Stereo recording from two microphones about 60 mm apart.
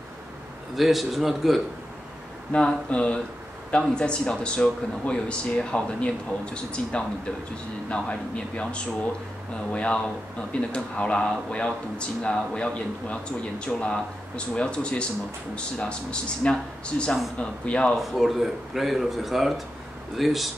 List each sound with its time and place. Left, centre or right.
0.7 s speech: centre
2.5 s speech: centre
17.9 s speech: centre